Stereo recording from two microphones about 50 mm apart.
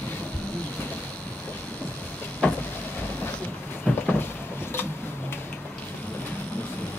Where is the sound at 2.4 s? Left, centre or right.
Left.